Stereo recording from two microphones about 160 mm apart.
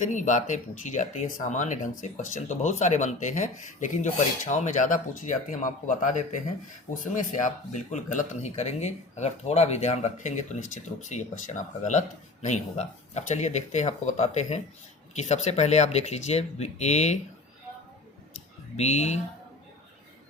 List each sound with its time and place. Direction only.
0.0 s speech: 50° left (ahead or behind)
18.8 s speech: 45° left (ahead or behind)